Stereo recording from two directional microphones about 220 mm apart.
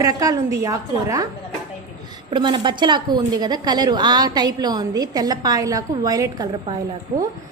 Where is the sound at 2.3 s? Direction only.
20° right (ahead or behind).